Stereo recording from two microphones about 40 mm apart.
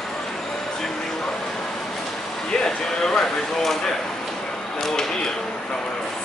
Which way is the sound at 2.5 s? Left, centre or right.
Centre.